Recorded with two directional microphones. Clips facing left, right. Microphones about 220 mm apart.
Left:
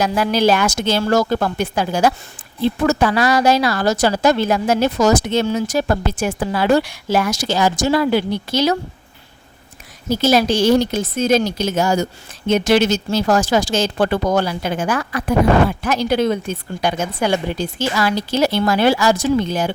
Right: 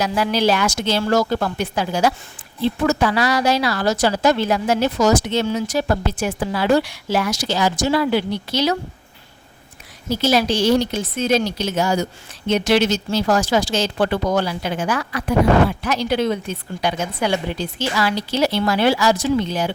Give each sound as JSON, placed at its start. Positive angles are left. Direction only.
{"t": 0.0, "sound": "a woman's voice", "side_deg": 50}
{"t": 10.1, "sound": "a woman's voice", "side_deg": 45}